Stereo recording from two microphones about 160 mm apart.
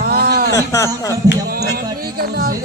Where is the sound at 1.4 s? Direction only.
70° right (ahead or behind).